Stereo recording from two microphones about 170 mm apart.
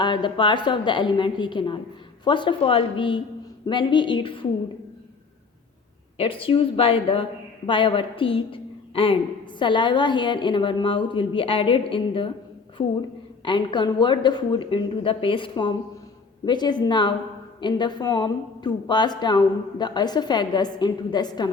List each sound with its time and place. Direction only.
0.0 s a woman's voice: 25° left (ahead or behind)
6.1 s a woman's voice: 30° left (ahead or behind)
13.4 s a woman's voice: 25° left (ahead or behind)